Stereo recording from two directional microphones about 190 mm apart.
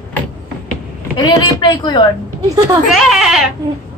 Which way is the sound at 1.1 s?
20° left (ahead or behind).